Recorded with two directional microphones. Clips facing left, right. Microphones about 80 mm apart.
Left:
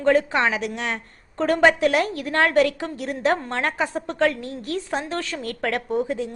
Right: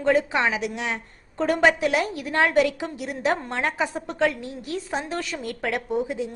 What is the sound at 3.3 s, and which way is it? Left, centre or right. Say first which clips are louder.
Speech: left 2 dB; centre.